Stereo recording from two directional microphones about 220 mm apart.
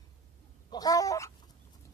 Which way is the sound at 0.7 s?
15° left (ahead or behind).